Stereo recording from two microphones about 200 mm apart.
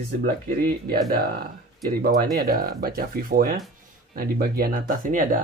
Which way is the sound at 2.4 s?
45° right (ahead or behind).